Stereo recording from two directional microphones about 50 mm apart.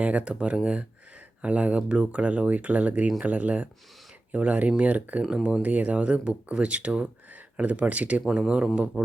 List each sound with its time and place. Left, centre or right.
0.0 s speech: right
5.2 s speech: right
8.3 s speech: centre